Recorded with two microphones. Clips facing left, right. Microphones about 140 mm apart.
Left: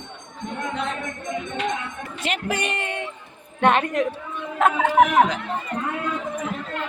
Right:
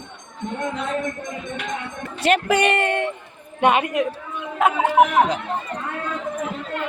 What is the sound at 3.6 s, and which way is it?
Speech, 10° right (ahead or behind).